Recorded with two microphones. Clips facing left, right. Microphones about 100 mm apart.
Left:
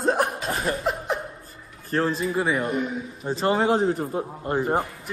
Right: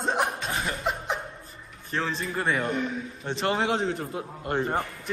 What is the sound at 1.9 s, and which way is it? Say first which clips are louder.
Speech: left 6 dB; 40° left (ahead or behind).